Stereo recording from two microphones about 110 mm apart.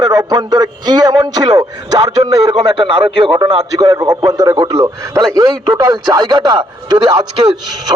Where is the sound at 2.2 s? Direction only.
50° right (ahead or behind).